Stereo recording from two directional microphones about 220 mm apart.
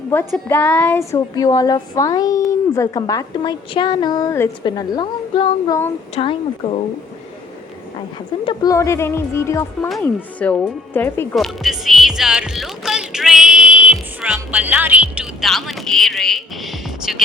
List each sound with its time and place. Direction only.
0.3 s speech: 10° left (ahead or behind)
6.2 s a woman's voice: 30° left (ahead or behind)
8.4 s speech: 15° left (ahead or behind); by 17.2 s centre (ahead or behind)